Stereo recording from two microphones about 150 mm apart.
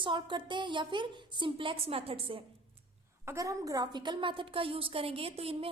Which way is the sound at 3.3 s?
20° right (ahead or behind).